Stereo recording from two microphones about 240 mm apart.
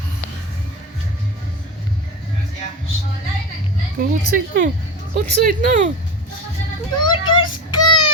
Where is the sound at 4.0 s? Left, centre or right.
Right.